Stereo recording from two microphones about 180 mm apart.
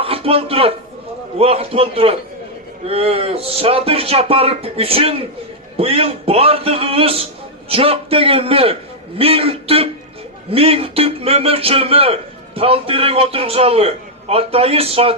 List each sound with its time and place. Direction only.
0.0 s a man's voice: 30° right (ahead or behind)